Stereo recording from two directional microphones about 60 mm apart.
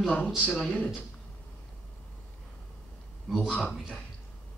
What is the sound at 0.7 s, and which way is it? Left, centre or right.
Speech, centre.